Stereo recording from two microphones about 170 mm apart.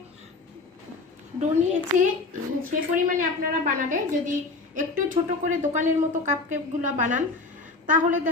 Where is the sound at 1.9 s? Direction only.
50° right (ahead or behind).